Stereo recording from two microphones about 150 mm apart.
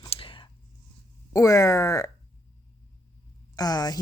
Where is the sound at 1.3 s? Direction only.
20° left (ahead or behind).